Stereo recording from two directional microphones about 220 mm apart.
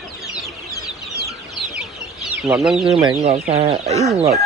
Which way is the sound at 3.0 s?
25° right (ahead or behind).